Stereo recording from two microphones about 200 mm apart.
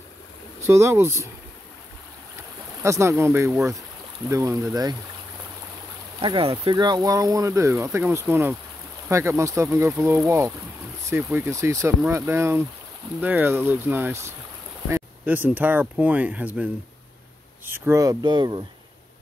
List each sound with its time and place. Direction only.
0.7 s speech: 15° right (ahead or behind)
2.8 s speech: 15° right (ahead or behind)
6.2 s speech: 25° right (ahead or behind); by 16.6 s 10° right (ahead or behind)
17.6 s speech: 10° right (ahead or behind)